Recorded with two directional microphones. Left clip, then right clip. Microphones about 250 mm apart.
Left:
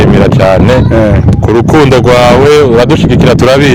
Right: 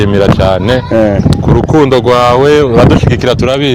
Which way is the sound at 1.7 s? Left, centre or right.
Left.